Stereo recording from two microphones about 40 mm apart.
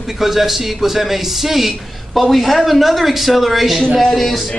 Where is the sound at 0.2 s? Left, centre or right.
Centre.